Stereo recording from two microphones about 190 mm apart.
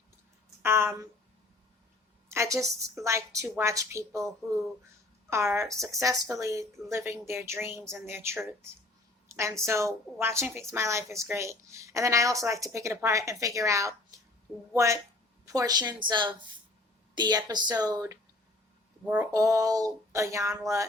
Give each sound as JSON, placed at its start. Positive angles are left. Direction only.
{"t": 0.6, "sound": "speech", "side_deg": -15}
{"t": 2.3, "sound": "a woman's voice", "side_deg": -15}
{"t": 5.3, "sound": "a woman's voice", "side_deg": -15}
{"t": 19.0, "sound": "a woman's voice", "side_deg": -5}
{"t": 19.3, "sound": "a woman's voice", "side_deg": -20}